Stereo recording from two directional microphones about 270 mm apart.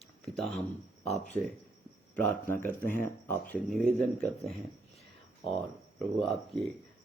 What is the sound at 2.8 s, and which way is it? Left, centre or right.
Speech, left.